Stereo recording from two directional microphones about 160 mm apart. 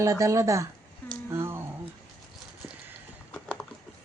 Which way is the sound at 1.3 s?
15° right (ahead or behind).